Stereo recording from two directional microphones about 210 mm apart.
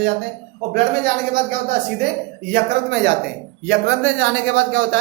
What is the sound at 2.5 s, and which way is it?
Speech, 50° right (ahead or behind).